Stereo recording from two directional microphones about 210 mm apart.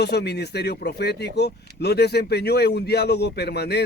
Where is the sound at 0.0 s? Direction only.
50° left (ahead or behind).